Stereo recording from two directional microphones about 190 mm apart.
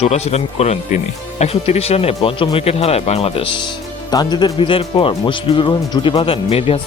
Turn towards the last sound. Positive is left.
turn(degrees=30)  # may be behind; listen again after turning